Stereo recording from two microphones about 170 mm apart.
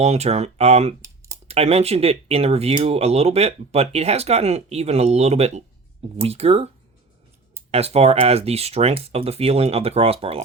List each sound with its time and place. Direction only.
0.0 s speech: 40° right (ahead or behind)
1.0 s a sound: 15° right (ahead or behind)
1.5 s speech: 35° right (ahead or behind)
7.7 s speech: 35° right (ahead or behind)